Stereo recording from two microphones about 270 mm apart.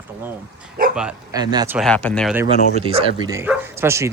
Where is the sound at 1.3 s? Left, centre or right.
Centre.